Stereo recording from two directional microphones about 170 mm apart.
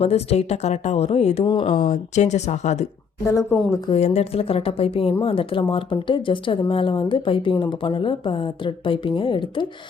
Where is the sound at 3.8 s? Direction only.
40° left (ahead or behind).